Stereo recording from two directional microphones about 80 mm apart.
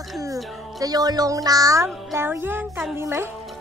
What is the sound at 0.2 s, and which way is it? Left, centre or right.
Speech, right.